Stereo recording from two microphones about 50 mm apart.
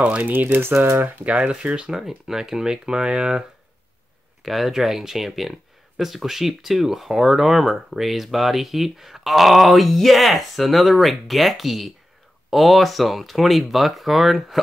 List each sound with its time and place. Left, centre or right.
0.0 s speech: right
0.6 s speech: right
1.0 s speech: right
4.4 s speech: centre